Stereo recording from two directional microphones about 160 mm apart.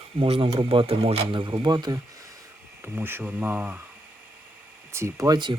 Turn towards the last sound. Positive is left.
turn(degrees=-25)  # may be behind; listen again after turning